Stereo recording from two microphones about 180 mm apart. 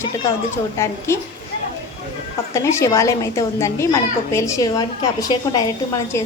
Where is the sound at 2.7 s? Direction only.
15° left (ahead or behind).